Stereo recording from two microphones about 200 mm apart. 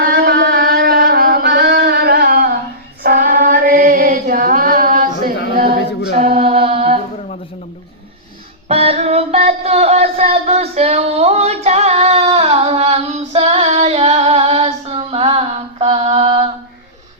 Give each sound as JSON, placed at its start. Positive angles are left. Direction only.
{"t": 0.0, "sound": "a sound", "side_deg": -55}
{"t": 3.0, "sound": "music", "side_deg": -45}
{"t": 6.3, "sound": "mantra", "side_deg": -30}
{"t": 8.6, "sound": "music", "side_deg": -30}